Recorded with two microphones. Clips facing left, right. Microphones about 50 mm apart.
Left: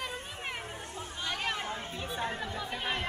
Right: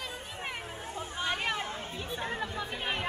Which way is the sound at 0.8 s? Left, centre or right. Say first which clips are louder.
Right 7 dB; centre.